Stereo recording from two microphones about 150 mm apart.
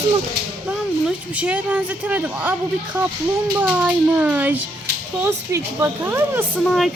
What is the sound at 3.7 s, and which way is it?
Speech, 10° right (ahead or behind).